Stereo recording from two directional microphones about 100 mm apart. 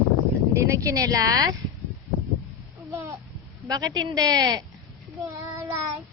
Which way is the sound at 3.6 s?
40° right (ahead or behind).